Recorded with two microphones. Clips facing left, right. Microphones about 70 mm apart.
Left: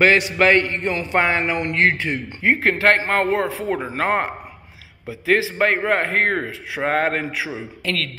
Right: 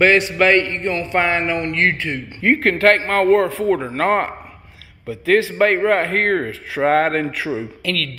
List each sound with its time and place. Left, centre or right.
0.4 s a man's voice: centre
7.8 s speech: left